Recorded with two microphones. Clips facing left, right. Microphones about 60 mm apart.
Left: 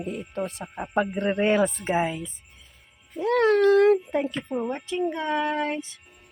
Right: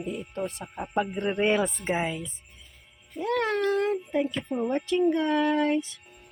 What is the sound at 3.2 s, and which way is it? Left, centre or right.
Speech, left.